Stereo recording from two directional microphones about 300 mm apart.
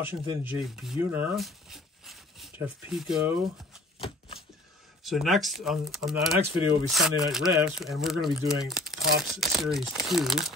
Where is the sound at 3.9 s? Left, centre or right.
Centre.